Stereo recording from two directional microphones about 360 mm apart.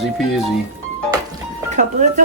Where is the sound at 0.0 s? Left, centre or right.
Centre.